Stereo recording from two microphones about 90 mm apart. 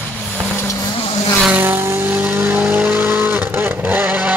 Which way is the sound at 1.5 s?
20° right (ahead or behind).